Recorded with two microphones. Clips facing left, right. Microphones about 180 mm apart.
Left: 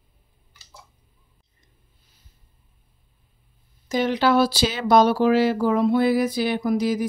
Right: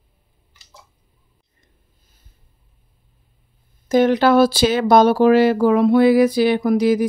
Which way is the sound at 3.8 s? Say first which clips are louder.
Right 6 dB; 50° right (ahead or behind).